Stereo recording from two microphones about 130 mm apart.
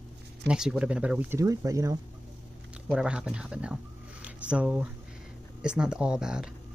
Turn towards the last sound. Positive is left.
turn(degrees=-5)  # may be behind; listen again after turning